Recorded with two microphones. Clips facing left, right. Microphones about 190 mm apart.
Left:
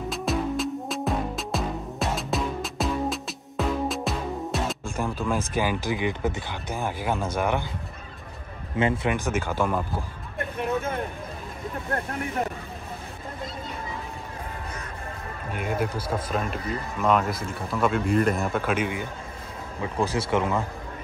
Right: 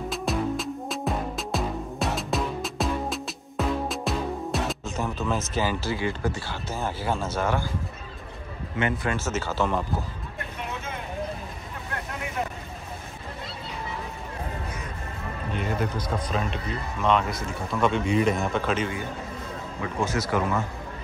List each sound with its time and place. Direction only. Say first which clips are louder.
0.1 s music: left 1 dB; centre (ahead or behind)
4.8 s music: left 1 dB; 10° left (ahead or behind)
5.5 s speech: left 1 dB; 15° left (ahead or behind)
8.7 s speech: left 3 dB; 30° left (ahead or behind)
9.1 s speech: left 2 dB; 15° left (ahead or behind)
15.5 s speech: left 1 dB; 10° left (ahead or behind)
20.0 s speech: left 1 dB; 30° left (ahead or behind)